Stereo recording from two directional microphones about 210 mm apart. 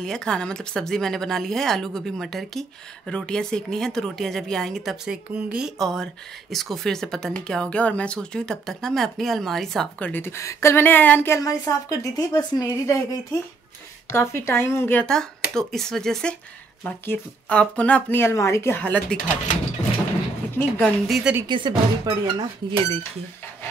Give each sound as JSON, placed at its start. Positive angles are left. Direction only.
{"t": 0.0, "sound": "speech", "side_deg": 5}
{"t": 20.5, "sound": "speech", "side_deg": 5}
{"t": 21.5, "sound": "speech", "side_deg": -20}